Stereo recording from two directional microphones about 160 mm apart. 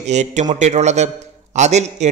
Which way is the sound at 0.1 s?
45° right (ahead or behind).